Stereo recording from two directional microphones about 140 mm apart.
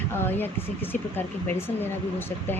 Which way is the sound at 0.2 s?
15° left (ahead or behind).